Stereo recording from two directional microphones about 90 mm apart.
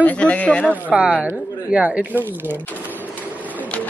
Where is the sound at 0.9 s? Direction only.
10° right (ahead or behind).